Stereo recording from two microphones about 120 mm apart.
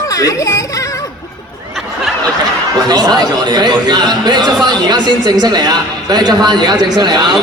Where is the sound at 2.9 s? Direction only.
35° right (ahead or behind).